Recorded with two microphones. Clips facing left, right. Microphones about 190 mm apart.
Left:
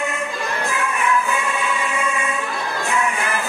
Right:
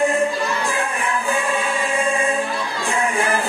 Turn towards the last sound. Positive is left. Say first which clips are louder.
# right 2 dB
turn(degrees=-30)  # may be behind; listen again after turning